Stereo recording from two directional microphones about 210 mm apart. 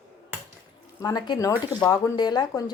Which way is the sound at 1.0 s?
20° left (ahead or behind).